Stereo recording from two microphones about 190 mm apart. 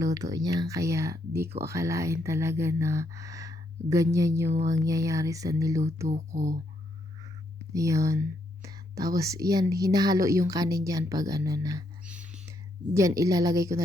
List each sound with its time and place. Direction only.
0.0 s speech: 20° right (ahead or behind)
6.1 s speech: 40° right (ahead or behind)
7.7 s speech: 15° right (ahead or behind)
12.0 s whispering: 5° right (ahead or behind)
12.9 s speech: 15° right (ahead or behind)